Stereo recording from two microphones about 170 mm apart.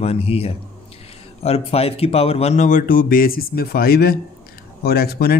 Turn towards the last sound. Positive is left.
turn(degrees=65)  # may be behind; listen again after turning